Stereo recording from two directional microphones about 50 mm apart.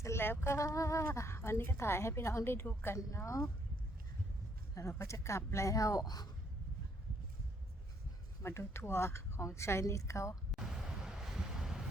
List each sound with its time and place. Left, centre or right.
0.2 s a woman's voice: left
1.0 s a woman's voice: left
4.8 s a woman's voice: left
8.4 s a woman's voice: left
10.6 s waves: centre